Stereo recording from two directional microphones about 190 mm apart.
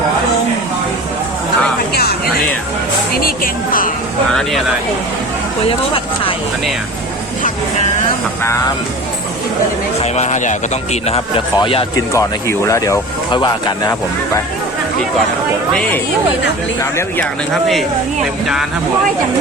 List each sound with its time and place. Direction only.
2.0 s a sound: 55° left (ahead or behind)
3.2 s speech: 50° left (ahead or behind)
4.3 s speech: centre (ahead or behind)
5.6 s a sound: 30° left (ahead or behind)
8.4 s speech: 15° left (ahead or behind)
10.0 s speech: 35° left (ahead or behind)
11.0 s a man's voice: 30° left (ahead or behind)
12.1 s speech: 15° left (ahead or behind)
17.2 s speech: centre (ahead or behind)